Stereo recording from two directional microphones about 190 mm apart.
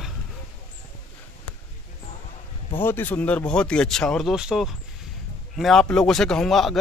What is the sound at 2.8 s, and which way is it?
Speech, 10° left (ahead or behind).